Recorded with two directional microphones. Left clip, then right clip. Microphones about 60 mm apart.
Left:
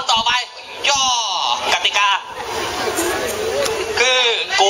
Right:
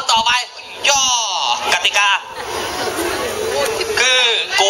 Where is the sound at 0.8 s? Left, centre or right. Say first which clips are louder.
Right 2 dB; right.